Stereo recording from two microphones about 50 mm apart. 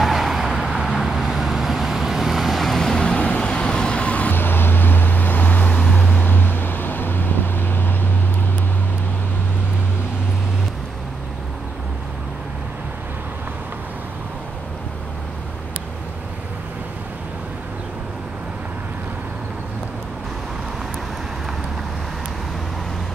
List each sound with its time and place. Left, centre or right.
0.0 s vehicle: centre; by 4.3 s left
4.3 s vehicle: left
6.1 s vehicle: left